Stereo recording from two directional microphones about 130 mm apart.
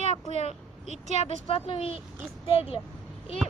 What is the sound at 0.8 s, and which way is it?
Speech, 65° right (ahead or behind).